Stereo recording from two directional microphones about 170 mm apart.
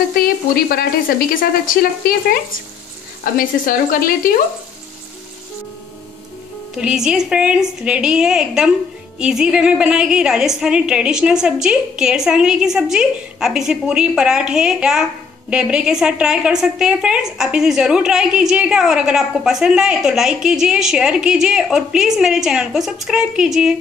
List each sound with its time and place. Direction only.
0.1 s speech: 60° left (ahead or behind)
3.3 s speech: 55° left (ahead or behind)
6.7 s a woman's voice: 5° right (ahead or behind)